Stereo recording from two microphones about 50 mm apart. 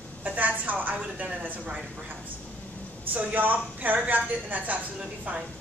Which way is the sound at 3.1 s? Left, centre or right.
Right.